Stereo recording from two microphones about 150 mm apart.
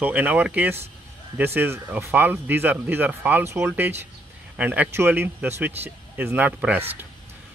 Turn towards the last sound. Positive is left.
turn(degrees=-15)  # may be behind; listen again after turning